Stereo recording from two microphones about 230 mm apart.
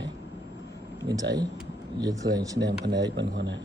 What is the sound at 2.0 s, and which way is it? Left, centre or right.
Speech, centre.